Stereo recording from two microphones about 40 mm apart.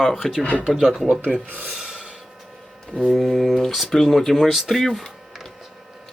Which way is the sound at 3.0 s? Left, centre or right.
Centre.